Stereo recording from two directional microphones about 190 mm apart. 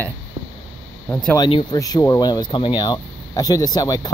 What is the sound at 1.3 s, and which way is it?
Speech, 20° left (ahead or behind).